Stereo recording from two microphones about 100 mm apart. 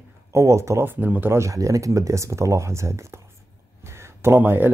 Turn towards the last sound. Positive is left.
turn(degrees=-20)  # may be behind; listen again after turning